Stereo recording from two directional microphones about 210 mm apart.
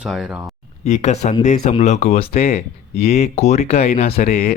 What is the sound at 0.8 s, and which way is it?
Speech, 30° left (ahead or behind).